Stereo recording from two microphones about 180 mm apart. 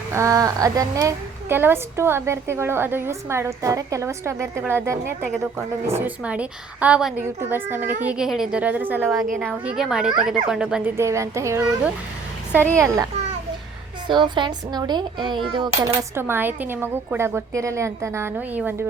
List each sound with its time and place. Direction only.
0.1 s a woman's voice: 15° right (ahead or behind)
10.9 s a woman's voice: 15° right (ahead or behind)
12.7 s a woman's voice: 15° right (ahead or behind)
14.1 s a woman's voice: 25° right (ahead or behind); by 18.9 s 10° right (ahead or behind)